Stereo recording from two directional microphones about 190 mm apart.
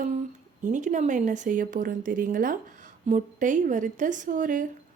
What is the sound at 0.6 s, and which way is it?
Speech, 40° right (ahead or behind).